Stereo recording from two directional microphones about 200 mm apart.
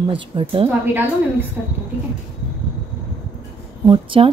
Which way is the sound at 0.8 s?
10° right (ahead or behind).